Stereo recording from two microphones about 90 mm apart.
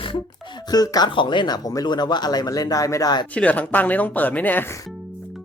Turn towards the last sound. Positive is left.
turn(degrees=20)  # may be behind; listen again after turning